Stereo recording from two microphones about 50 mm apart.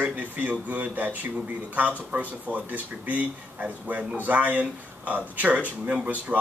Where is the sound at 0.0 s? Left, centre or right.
Right.